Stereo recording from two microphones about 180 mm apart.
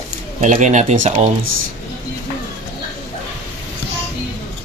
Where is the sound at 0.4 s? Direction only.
45° right (ahead or behind).